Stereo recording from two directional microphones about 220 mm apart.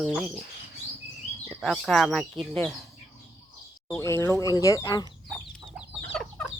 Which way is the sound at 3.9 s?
15° left (ahead or behind).